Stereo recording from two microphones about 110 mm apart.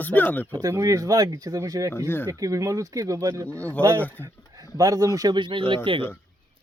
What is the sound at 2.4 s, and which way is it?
Speech, 30° right (ahead or behind).